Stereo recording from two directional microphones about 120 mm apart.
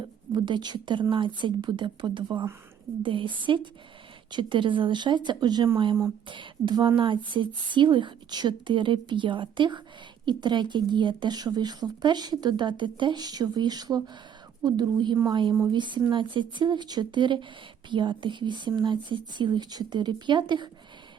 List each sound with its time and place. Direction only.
0.3 s a woman's voice: 40° right (ahead or behind)